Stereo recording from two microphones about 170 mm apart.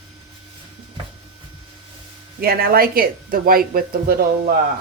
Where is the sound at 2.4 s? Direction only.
65° right (ahead or behind).